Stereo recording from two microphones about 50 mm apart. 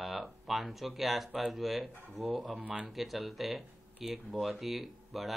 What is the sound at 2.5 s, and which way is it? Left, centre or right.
Speech, right.